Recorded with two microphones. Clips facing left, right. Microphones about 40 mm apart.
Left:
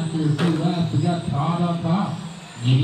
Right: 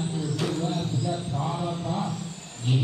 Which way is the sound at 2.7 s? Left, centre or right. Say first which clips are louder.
Left 5 dB; left.